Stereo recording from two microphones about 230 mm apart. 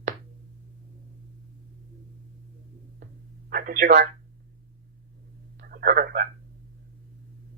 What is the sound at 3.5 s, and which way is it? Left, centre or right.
Speech, right.